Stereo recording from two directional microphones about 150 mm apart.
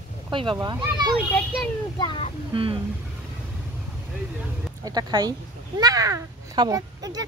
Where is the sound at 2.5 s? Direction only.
35° right (ahead or behind).